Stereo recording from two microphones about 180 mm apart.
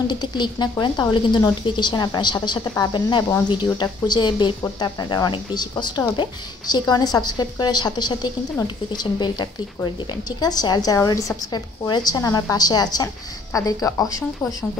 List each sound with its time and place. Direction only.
0.1 s speech: 25° left (ahead or behind)